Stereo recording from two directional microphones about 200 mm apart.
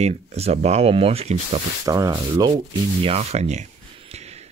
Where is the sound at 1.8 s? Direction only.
20° right (ahead or behind).